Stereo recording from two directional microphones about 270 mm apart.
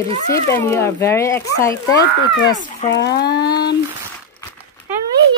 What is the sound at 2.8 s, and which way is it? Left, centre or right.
Speech, left.